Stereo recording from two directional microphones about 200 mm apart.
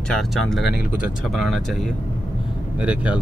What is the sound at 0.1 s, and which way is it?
Speech, centre (ahead or behind).